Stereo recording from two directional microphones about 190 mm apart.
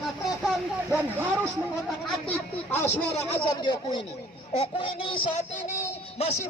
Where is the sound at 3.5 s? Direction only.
25° left (ahead or behind).